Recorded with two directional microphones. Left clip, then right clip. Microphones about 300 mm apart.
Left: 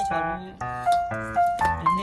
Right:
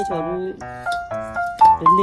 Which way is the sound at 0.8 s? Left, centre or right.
Centre.